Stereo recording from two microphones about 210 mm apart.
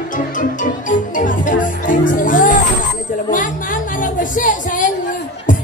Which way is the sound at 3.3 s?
40° left (ahead or behind).